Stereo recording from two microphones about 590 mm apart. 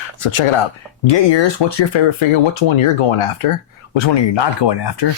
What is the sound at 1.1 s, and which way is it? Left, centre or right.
Speech, left.